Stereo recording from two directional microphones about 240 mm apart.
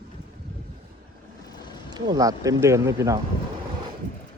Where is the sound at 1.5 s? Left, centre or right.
Centre.